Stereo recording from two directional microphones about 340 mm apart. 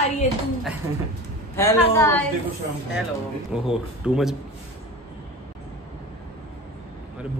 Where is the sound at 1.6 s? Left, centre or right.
Centre.